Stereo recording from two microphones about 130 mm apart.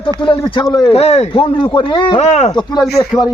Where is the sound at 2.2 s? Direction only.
60° left (ahead or behind).